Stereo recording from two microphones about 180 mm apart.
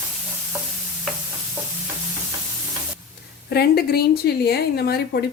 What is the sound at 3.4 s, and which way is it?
A woman's voice, 60° left (ahead or behind).